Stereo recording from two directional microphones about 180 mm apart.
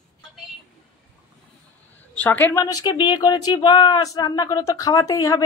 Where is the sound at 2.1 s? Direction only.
10° left (ahead or behind).